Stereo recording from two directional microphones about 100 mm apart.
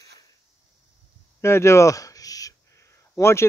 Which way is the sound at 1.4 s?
30° left (ahead or behind).